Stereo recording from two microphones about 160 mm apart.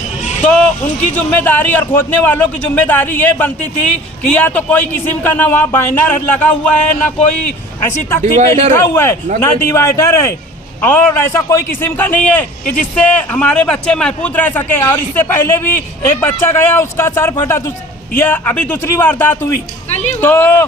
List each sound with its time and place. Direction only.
0.4 s a sound: 10° left (ahead or behind)
1.1 s a man's voice: 10° left (ahead or behind)
7.8 s a man's voice: 15° left (ahead or behind)
8.2 s speech: 50° right (ahead or behind)
8.7 s a man's voice: 15° left (ahead or behind)
19.9 s speech: 45° left (ahead or behind)
20.2 s a man's voice: 10° left (ahead or behind)